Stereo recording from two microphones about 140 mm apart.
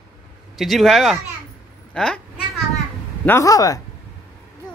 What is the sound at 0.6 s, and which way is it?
Speech, centre (ahead or behind).